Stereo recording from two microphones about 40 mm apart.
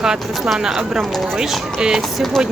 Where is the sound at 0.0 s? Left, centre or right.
Centre.